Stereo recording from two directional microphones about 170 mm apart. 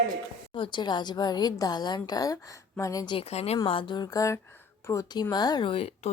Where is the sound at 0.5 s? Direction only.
30° left (ahead or behind).